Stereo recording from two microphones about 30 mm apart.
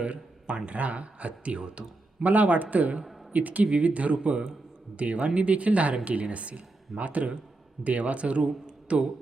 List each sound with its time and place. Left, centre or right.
0.5 s speech: right
2.2 s a man's voice: right
3.7 s speech: right